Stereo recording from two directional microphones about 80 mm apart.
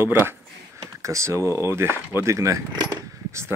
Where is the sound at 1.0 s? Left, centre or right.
Right.